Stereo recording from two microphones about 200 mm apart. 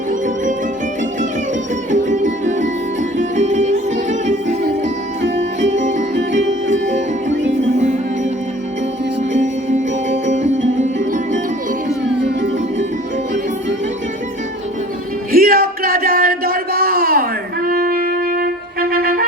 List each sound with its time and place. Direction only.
1.9 s music: 35° right (ahead or behind)
3.3 s music: 35° right (ahead or behind)
5.2 s music: 65° right (ahead or behind)
5.7 s music: 40° right (ahead or behind)
9.3 s music: 35° right (ahead or behind)
15.3 s a sound: 45° right (ahead or behind)